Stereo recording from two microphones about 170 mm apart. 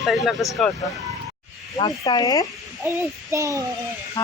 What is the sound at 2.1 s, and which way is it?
Speech, 25° left (ahead or behind).